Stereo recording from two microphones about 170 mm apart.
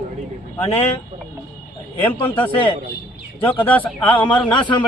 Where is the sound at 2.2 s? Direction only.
30° left (ahead or behind).